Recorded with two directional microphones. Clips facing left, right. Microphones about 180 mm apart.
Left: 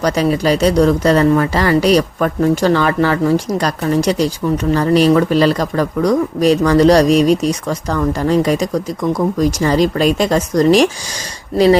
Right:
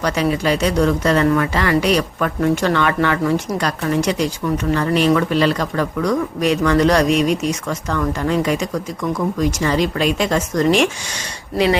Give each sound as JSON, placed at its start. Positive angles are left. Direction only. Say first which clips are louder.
{"t": 0.0, "sound": "speech", "louder": "left 4 dB", "side_deg": 35}